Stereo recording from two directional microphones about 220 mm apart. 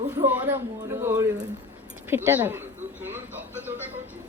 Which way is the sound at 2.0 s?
10° right (ahead or behind).